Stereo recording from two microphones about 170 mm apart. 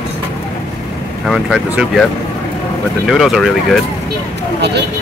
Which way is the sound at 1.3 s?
Centre (ahead or behind).